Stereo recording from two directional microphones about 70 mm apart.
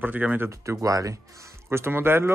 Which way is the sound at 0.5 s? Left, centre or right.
Right.